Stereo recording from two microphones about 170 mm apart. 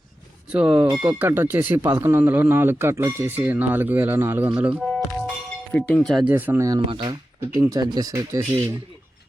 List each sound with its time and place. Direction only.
0.5 s speech: 5° right (ahead or behind)
4.8 s music: centre (ahead or behind)
5.7 s speech: 5° left (ahead or behind)
6.3 s speech: 10° right (ahead or behind)